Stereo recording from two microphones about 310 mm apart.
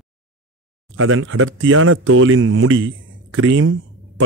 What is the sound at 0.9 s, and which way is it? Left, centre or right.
Speech, right.